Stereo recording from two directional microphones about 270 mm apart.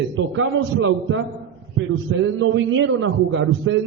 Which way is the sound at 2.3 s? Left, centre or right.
Right.